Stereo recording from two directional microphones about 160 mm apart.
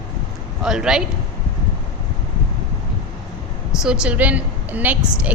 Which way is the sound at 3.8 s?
5° right (ahead or behind).